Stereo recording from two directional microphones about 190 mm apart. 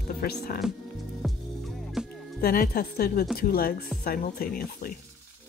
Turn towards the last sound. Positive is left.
turn(degrees=50)  # may be behind; listen again after turning